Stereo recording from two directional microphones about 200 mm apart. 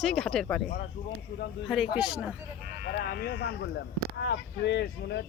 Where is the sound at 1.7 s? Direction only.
5° right (ahead or behind).